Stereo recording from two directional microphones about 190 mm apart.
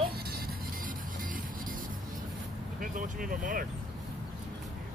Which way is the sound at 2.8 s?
45° right (ahead or behind).